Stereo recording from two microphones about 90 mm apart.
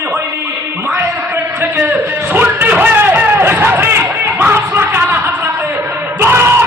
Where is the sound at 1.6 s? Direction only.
20° right (ahead or behind).